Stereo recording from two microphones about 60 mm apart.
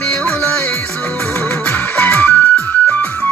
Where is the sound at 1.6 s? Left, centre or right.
Left.